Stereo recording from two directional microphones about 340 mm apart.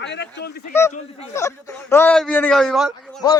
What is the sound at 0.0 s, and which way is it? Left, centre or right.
Speech, left.